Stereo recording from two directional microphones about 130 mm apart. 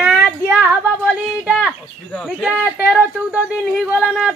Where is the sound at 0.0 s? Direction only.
5° right (ahead or behind).